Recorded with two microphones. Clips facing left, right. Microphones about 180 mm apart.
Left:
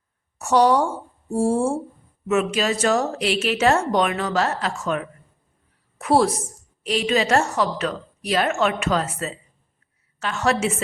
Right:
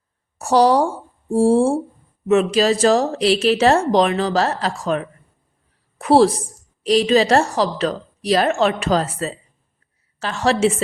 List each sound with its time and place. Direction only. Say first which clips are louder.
0.3 s a woman's voice: right 3 dB; 35° right (ahead or behind)